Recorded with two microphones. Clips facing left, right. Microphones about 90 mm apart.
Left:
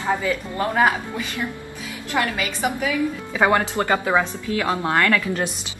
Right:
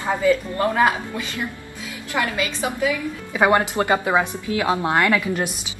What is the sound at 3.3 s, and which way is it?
A woman's voice, 10° right (ahead or behind).